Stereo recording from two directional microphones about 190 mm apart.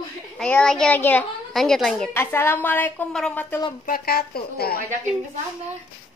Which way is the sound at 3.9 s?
55° left (ahead or behind).